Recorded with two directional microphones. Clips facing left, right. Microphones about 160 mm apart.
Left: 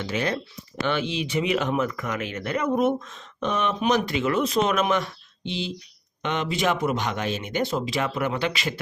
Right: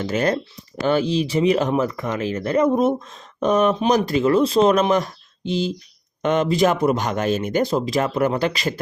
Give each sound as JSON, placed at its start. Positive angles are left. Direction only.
{"t": 0.0, "sound": "speech", "side_deg": -45}